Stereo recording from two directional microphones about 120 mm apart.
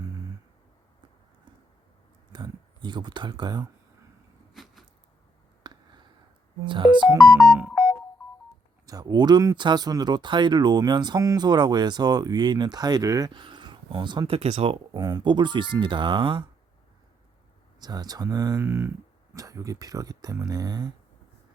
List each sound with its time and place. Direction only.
2.3 s speech: 40° right (ahead or behind)
4.5 s vehicle: centre (ahead or behind)
5.6 s a sound: 35° right (ahead or behind)
6.7 s speech: 40° right (ahead or behind)
8.9 s speech: 30° right (ahead or behind)
14.3 s speech: 55° right (ahead or behind)
14.9 s speech: 35° right (ahead or behind)
17.7 s speech: 35° right (ahead or behind)
18.6 s speech: 20° right (ahead or behind)